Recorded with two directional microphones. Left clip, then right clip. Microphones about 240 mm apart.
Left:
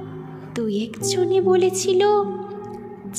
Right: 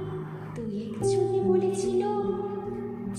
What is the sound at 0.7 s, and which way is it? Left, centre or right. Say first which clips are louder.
Music: left 2 dB; left.